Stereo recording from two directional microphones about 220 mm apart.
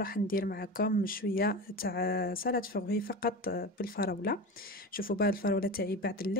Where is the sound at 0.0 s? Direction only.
40° left (ahead or behind).